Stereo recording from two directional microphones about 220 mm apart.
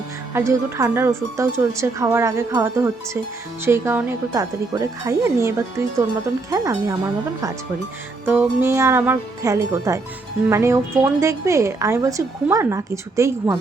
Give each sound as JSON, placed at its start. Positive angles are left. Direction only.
{"t": 0.3, "sound": "speech", "side_deg": -10}
{"t": 8.2, "sound": "speech", "side_deg": -10}